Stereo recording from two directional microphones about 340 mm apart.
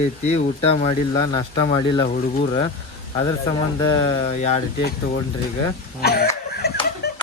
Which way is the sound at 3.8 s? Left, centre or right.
Centre.